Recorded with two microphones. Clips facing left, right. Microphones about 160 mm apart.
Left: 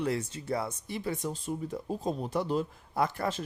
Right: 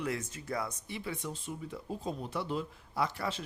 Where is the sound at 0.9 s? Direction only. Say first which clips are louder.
Left 5 dB; 40° left (ahead or behind).